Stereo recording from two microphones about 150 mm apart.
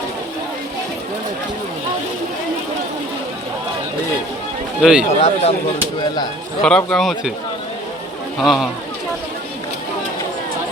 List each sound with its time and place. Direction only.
4.8 s speech: 5° right (ahead or behind)
5.2 s speech: 40° left (ahead or behind)
6.6 s speech: 5° left (ahead or behind)
8.4 s speech: centre (ahead or behind)